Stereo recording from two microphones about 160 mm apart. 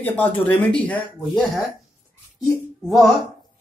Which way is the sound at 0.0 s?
10° left (ahead or behind).